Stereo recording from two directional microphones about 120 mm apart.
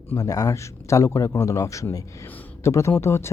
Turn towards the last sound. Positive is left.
turn(degrees=20)  # may be behind; listen again after turning